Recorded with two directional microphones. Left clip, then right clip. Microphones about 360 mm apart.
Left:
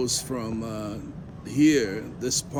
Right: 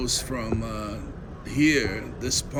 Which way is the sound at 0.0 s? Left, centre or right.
Centre.